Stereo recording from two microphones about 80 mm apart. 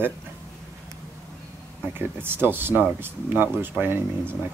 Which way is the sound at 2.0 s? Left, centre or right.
Right.